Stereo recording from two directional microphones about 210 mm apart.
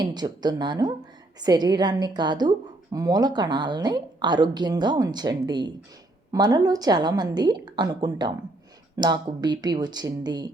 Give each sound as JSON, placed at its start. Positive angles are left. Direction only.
{"t": 0.0, "sound": "a woman's voice", "side_deg": -20}